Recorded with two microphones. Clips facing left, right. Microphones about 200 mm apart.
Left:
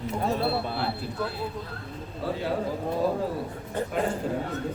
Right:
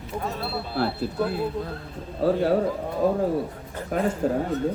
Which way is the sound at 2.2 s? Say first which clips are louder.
Right 9 dB; 45° right (ahead or behind).